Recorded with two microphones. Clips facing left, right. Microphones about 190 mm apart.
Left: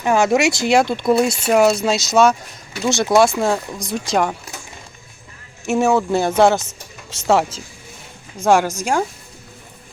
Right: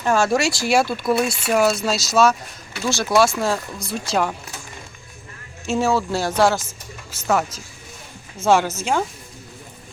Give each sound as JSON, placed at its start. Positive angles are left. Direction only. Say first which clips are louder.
{"t": 0.0, "sound": "speech", "louder": "left 3 dB", "side_deg": 15}
{"t": 5.6, "sound": "speech", "louder": "left 4 dB", "side_deg": 20}
{"t": 6.7, "sound": "vehicle", "louder": "even", "side_deg": 90}
{"t": 7.3, "sound": "speech", "louder": "left 4 dB", "side_deg": 25}
{"t": 8.4, "sound": "speech", "louder": "left 2 dB", "side_deg": 15}